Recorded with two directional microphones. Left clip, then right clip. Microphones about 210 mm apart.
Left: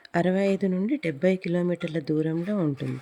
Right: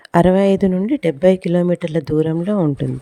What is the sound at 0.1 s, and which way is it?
Speech, 45° right (ahead or behind).